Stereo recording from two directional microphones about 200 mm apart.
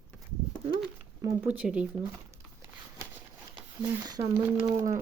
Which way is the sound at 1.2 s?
15° right (ahead or behind).